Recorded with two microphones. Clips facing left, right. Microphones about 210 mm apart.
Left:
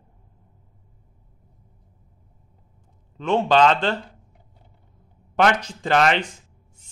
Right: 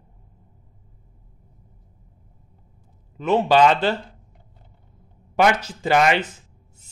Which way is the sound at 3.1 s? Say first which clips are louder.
Right 1 dB; 5° right (ahead or behind).